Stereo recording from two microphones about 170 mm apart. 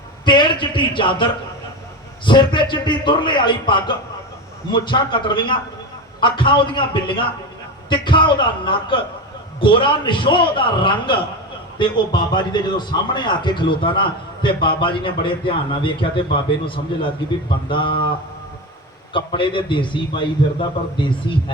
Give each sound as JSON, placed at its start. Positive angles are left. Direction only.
{"t": 0.3, "sound": "a sound", "side_deg": 30}
{"t": 2.2, "sound": "a man's voice", "side_deg": 25}
{"t": 19.1, "sound": "a man's voice", "side_deg": 30}